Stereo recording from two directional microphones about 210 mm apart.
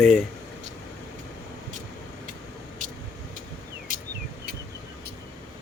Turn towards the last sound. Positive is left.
turn(degrees=-40)  # may be behind; listen again after turning